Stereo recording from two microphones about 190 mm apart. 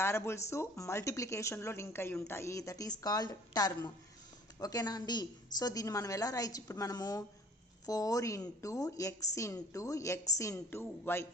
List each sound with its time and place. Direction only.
0.0 s a woman's voice: 15° left (ahead or behind)